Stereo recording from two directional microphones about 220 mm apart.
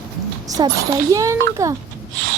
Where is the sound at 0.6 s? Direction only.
20° right (ahead or behind).